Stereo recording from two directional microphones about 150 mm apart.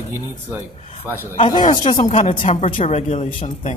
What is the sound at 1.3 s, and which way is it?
A man's voice, 35° left (ahead or behind).